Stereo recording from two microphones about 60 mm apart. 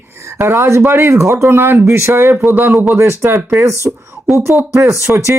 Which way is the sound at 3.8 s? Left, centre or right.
Centre.